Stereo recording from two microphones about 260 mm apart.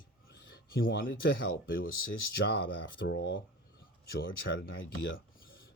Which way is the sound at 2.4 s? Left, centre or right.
Left.